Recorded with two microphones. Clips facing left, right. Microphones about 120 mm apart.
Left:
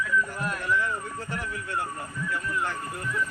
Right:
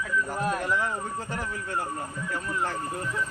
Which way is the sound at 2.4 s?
35° right (ahead or behind).